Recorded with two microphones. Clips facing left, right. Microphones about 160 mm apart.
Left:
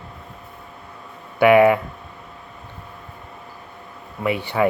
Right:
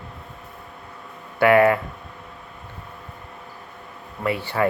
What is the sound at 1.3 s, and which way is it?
Speech, 15° left (ahead or behind).